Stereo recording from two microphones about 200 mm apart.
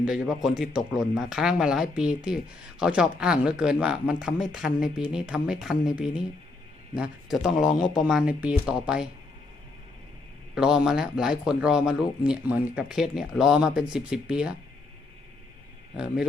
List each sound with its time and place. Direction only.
0.0 s speech: 5° right (ahead or behind)
10.5 s speech: 5° right (ahead or behind)